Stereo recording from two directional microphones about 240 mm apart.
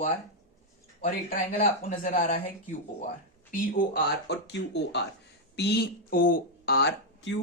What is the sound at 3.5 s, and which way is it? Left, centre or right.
Speech, left.